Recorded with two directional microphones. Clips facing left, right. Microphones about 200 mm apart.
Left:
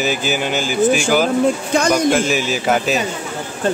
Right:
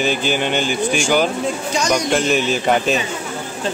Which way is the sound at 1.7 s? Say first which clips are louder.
Left 3 dB; 55° left (ahead or behind).